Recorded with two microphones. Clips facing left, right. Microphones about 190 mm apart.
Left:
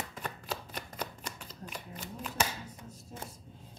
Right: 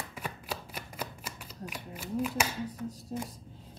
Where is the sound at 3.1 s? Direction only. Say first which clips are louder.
Right 7 dB; 35° right (ahead or behind).